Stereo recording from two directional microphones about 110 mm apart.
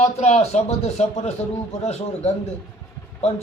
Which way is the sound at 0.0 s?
85° left.